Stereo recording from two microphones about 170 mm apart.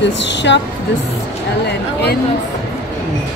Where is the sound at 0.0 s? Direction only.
90° left.